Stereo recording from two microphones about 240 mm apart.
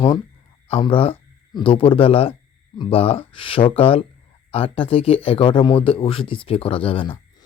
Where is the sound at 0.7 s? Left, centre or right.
Left.